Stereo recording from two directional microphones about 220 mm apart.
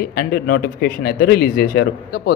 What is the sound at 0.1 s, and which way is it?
Speech, 45° left (ahead or behind).